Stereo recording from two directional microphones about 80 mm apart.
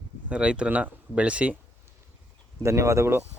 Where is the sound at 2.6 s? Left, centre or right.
Right.